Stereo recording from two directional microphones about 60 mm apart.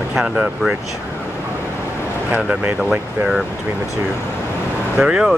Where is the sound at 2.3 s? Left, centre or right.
Right.